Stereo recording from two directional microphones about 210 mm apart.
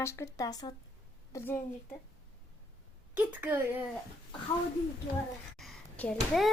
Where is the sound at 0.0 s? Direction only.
15° left (ahead or behind).